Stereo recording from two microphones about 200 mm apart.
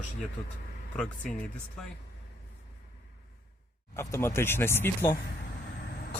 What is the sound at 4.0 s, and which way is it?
Speech, 15° left (ahead or behind).